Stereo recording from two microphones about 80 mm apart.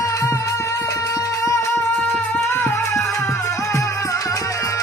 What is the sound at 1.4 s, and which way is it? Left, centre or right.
Music, left.